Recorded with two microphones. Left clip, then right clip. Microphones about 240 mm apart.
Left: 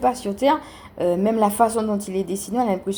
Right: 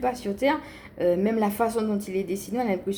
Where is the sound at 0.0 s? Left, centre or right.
Left.